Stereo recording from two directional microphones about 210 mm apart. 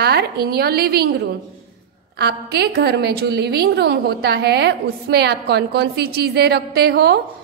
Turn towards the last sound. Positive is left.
turn(degrees=-50)  # may be behind; listen again after turning